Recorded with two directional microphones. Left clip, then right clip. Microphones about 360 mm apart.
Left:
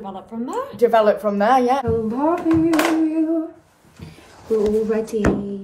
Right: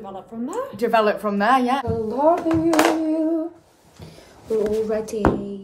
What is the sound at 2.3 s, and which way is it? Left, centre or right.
Hands, right.